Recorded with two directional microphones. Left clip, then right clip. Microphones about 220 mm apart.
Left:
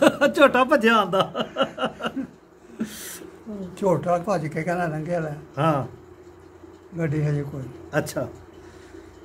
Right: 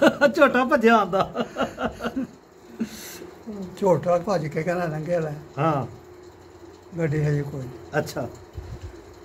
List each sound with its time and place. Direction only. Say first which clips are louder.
0.0 s speech: even; 20° left (ahead or behind)
2.8 s a sound: even; 25° left (ahead or behind)
3.7 s speech: right 1 dB; 5° right (ahead or behind)
5.6 s speech: left 1 dB; 25° left (ahead or behind)
7.0 s a man's voice: right 1 dB; 5° right (ahead or behind)
7.9 s speech: even; 25° left (ahead or behind)